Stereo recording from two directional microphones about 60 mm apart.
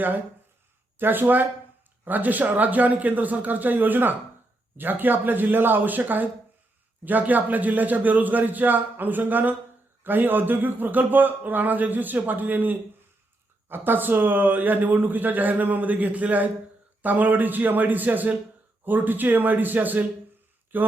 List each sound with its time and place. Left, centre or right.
0.9 s a man's voice: right